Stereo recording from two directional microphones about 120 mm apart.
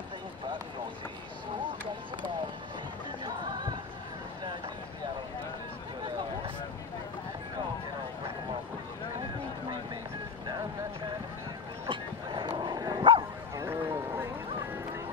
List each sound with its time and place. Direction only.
3.3 s music: 35° right (ahead or behind)
11.9 s bow-wow: 40° right (ahead or behind)
13.6 s a sound: 20° right (ahead or behind)